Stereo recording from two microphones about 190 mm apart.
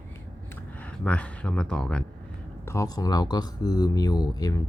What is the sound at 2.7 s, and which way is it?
Speech, 20° left (ahead or behind).